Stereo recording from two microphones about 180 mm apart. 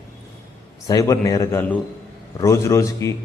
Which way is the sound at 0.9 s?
20° left (ahead or behind).